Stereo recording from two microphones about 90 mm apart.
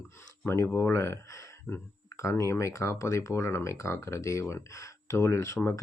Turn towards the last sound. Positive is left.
turn(degrees=30)  # may be behind; listen again after turning